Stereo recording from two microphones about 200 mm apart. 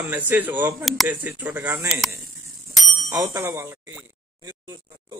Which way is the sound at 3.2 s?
15° right (ahead or behind).